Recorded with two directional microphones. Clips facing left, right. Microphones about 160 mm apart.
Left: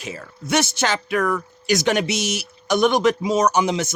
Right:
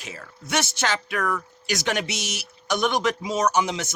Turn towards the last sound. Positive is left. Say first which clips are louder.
# left 4 dB
turn(degrees=15)  # may be behind; listen again after turning